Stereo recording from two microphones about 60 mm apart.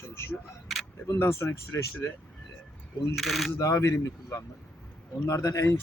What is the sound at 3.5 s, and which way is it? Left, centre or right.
Speech, left.